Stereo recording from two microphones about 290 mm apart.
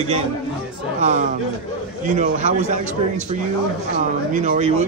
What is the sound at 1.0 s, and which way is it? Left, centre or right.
Speech, right.